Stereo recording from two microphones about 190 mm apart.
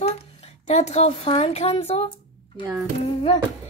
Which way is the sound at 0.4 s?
35° left (ahead or behind).